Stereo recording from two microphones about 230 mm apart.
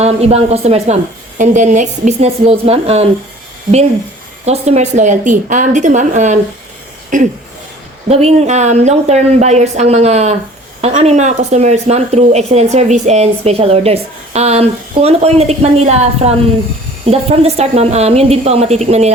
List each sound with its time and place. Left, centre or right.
0.0 s speech: right
4.4 s a woman's voice: right